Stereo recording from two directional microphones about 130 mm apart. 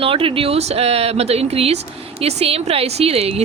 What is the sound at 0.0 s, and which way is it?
Speech, 45° right (ahead or behind).